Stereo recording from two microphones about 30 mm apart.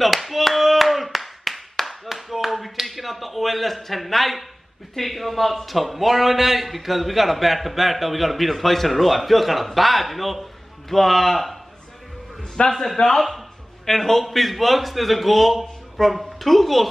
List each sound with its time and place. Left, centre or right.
0.0 s clapping: centre
4.9 s a man's voice: centre
12.6 s a man's voice: left
12.9 s a man's voice: centre
14.2 s a man's voice: centre